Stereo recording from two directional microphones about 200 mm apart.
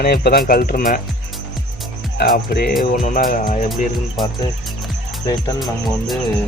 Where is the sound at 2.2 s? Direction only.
50° left (ahead or behind).